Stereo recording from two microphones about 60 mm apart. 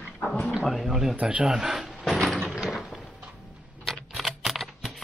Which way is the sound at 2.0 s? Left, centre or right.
Centre.